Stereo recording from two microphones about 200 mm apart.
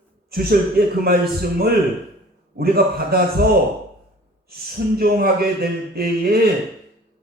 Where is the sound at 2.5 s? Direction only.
50° right (ahead or behind).